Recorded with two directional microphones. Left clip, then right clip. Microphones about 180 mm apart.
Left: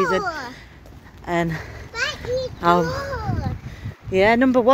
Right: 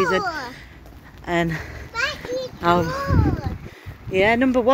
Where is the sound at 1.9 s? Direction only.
50° left (ahead or behind).